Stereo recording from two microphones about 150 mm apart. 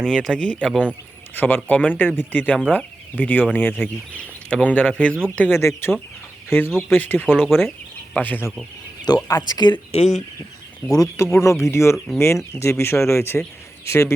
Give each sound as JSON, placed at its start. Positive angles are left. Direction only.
{"t": 0.0, "sound": "speech", "side_deg": 0}
{"t": 0.6, "sound": "speech", "side_deg": -5}
{"t": 1.4, "sound": "speech", "side_deg": 15}
{"t": 7.3, "sound": "speech", "side_deg": -5}
{"t": 8.1, "sound": "speech", "side_deg": 10}
{"t": 9.0, "sound": "speech", "side_deg": 25}
{"t": 9.9, "sound": "speech", "side_deg": 50}
{"t": 10.8, "sound": "speech", "side_deg": 15}